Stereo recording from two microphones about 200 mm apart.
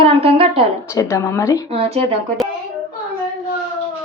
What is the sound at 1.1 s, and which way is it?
Speech, 15° left (ahead or behind).